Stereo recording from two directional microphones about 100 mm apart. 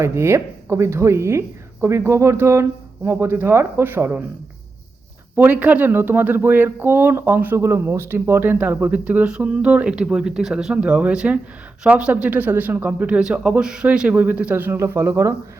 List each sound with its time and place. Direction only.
0.0 s speech: 25° right (ahead or behind)
5.4 s speech: 15° right (ahead or behind)